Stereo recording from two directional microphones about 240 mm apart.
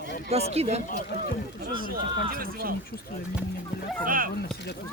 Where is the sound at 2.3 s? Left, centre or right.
Right.